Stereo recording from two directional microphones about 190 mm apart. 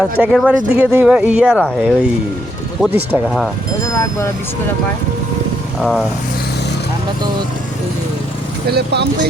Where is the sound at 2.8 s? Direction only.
5° right (ahead or behind).